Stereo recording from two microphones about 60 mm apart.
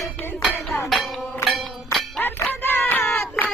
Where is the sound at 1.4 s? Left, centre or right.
Centre.